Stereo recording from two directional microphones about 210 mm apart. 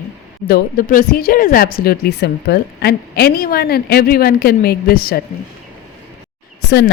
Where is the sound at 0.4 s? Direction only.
45° left (ahead or behind).